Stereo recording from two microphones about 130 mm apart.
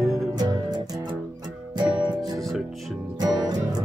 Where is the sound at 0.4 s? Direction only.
30° right (ahead or behind).